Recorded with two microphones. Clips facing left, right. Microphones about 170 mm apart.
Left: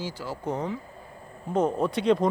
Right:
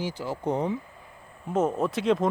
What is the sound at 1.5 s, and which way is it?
Speech, 5° right (ahead or behind).